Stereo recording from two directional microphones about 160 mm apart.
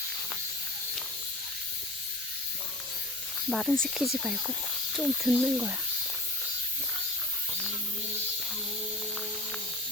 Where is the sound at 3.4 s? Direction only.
Centre (ahead or behind).